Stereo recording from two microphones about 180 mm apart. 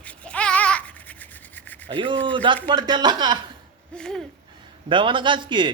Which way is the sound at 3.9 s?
5° left (ahead or behind).